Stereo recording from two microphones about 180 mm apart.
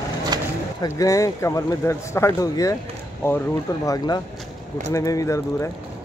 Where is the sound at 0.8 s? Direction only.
20° left (ahead or behind).